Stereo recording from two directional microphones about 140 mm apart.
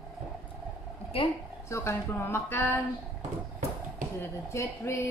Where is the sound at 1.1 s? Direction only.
40° left (ahead or behind).